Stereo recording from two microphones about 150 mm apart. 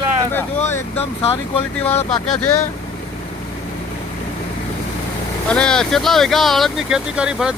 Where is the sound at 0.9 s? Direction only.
45° left (ahead or behind).